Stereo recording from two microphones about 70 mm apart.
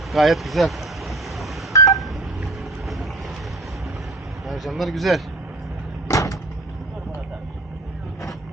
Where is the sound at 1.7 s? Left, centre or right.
Left.